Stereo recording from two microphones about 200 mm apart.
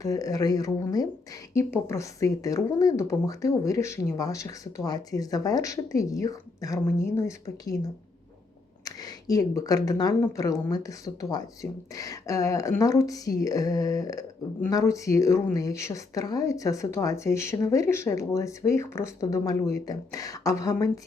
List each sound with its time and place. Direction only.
0.0 s speech: 15° left (ahead or behind)
8.8 s speech: 15° left (ahead or behind)